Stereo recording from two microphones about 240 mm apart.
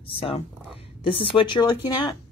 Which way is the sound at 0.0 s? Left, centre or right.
Left.